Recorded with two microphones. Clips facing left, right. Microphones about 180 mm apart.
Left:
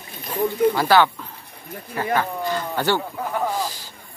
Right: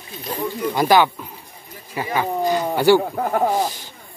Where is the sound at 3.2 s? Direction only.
45° right (ahead or behind).